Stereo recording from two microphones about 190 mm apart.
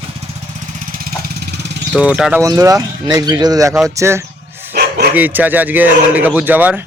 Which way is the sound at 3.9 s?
15° right (ahead or behind).